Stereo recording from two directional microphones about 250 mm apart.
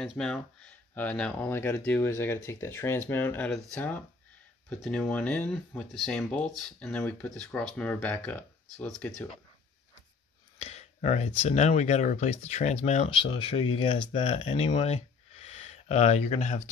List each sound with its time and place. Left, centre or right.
0.0 s speech: centre
10.6 s speech: left